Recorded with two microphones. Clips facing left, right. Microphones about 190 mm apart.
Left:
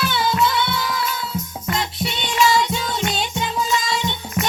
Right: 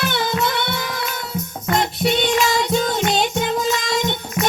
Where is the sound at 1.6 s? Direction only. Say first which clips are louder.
Right 7 dB; 45° right (ahead or behind).